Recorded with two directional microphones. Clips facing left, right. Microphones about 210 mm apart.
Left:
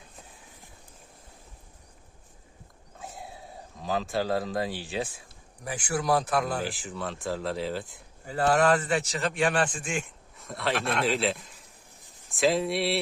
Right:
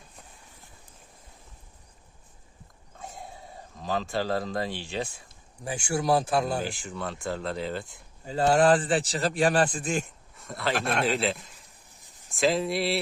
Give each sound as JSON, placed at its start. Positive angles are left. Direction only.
{"t": 3.0, "sound": "a sound", "side_deg": 0}
{"t": 5.6, "sound": "speech", "side_deg": -25}
{"t": 6.6, "sound": "speech", "side_deg": 5}
{"t": 8.2, "sound": "a man's voice", "side_deg": -20}
{"t": 10.3, "sound": "speech", "side_deg": 0}
{"t": 10.8, "sound": "speech", "side_deg": -30}
{"t": 11.0, "sound": "a man's voice", "side_deg": 0}